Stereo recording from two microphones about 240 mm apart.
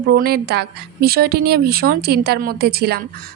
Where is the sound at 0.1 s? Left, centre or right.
Right.